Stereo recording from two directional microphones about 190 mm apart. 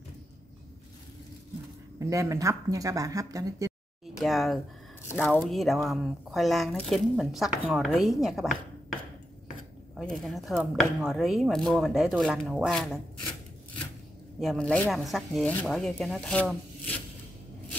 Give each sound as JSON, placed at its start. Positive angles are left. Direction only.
{"t": 2.0, "sound": "speech", "side_deg": -15}
{"t": 4.0, "sound": "a sound", "side_deg": 0}
{"t": 5.1, "sound": "speech", "side_deg": 5}
{"t": 9.9, "sound": "speech", "side_deg": 0}
{"t": 14.4, "sound": "speech", "side_deg": 0}